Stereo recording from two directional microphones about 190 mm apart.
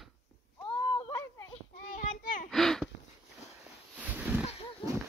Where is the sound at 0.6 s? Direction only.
25° left (ahead or behind).